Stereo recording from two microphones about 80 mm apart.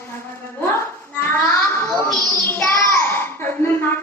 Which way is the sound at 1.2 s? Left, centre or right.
Left.